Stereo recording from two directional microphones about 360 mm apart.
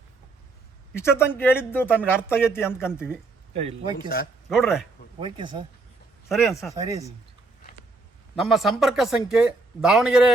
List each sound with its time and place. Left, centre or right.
0.9 s speech: centre
3.5 s a man's voice: centre
4.4 s speech: centre
5.2 s a man's voice: centre
6.2 s speech: centre
8.4 s speech: centre